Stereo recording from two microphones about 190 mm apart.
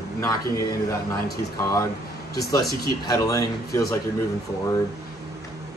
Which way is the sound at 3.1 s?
15° left (ahead or behind).